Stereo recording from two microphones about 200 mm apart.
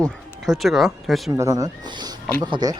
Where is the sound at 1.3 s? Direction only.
15° right (ahead or behind).